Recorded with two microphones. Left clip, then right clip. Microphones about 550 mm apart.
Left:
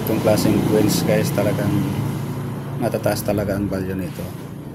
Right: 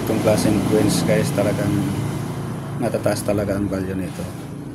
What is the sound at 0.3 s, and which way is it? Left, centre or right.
Speech, left.